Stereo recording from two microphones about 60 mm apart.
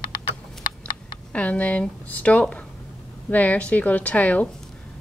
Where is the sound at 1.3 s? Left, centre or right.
Left.